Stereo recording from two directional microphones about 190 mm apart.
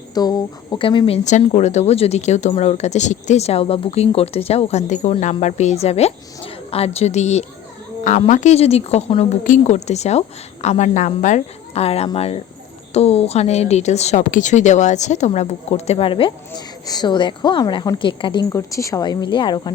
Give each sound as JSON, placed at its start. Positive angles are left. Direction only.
{"t": 0.1, "sound": "a woman's voice", "side_deg": 20}